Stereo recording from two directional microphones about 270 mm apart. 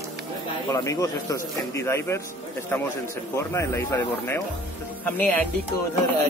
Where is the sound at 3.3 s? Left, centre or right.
Centre.